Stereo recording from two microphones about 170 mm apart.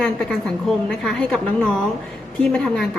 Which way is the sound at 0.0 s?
5° left (ahead or behind).